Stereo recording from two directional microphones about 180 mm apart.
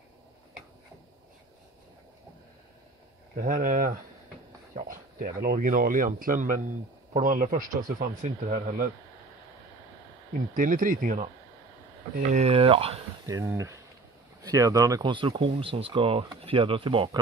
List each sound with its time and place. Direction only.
3.3 s speech: 45° right (ahead or behind)
10.5 s speech: 50° right (ahead or behind)
12.3 s speech: 35° right (ahead or behind)
13.3 s speech: 15° right (ahead or behind)